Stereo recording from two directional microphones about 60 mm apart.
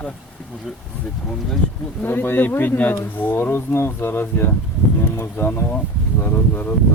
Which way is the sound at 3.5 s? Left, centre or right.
Left.